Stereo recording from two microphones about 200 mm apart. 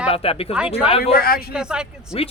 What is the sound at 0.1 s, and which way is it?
Speech, 30° left (ahead or behind).